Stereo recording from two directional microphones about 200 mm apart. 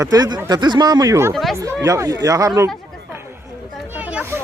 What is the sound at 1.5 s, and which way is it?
Speech, 15° right (ahead or behind).